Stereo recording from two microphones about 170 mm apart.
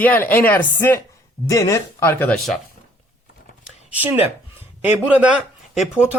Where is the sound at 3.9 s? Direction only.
10° right (ahead or behind).